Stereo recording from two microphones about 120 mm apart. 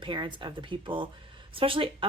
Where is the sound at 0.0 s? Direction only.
45° right (ahead or behind).